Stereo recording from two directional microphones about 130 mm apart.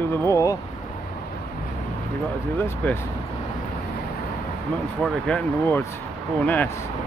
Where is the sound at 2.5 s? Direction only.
15° left (ahead or behind).